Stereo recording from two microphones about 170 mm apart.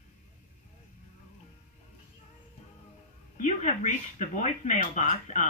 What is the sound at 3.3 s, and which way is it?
Speech, 45° left (ahead or behind).